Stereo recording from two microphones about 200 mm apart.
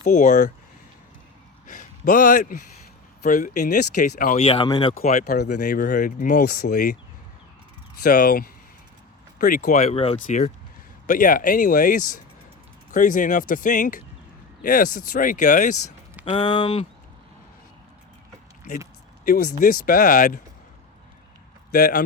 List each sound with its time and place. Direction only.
0.0 s speech: 40° left (ahead or behind)
1.6 s a sound: 40° left (ahead or behind)
3.2 s speech: 40° left (ahead or behind)
4.4 s speech: 30° left (ahead or behind)
4.9 s speech: 35° left (ahead or behind)
5.2 s speech: 55° left (ahead or behind)
5.5 s speech: 40° left (ahead or behind)
8.0 s speech: 45° left (ahead or behind)
16.3 s speech: 25° left (ahead or behind)
19.2 s speech: 45° left (ahead or behind)
21.7 s speech: 45° left (ahead or behind)